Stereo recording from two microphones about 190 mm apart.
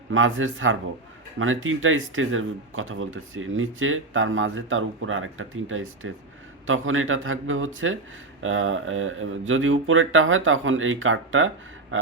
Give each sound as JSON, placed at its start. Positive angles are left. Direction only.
{"t": 0.1, "sound": "speech", "side_deg": -90}